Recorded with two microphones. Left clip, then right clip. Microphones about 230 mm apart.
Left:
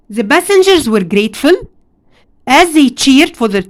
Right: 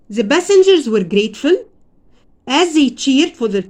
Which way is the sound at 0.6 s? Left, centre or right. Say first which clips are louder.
Left 2 dB; left.